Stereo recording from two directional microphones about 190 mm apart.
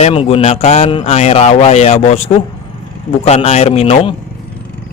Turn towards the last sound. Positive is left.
turn(degrees=30)  # may be behind; listen again after turning